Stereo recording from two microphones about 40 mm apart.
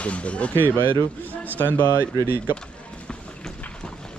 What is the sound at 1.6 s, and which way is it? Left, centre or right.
Speech, left.